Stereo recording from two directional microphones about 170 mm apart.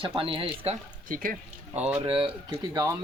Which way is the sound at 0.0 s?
30° right (ahead or behind).